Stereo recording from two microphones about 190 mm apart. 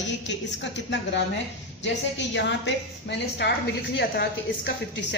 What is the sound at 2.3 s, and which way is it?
A woman's voice, 70° left (ahead or behind).